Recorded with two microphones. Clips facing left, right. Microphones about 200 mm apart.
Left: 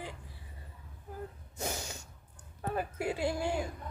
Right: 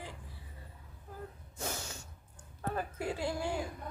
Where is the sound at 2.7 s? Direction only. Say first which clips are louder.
Left 3 dB; 15° left (ahead or behind).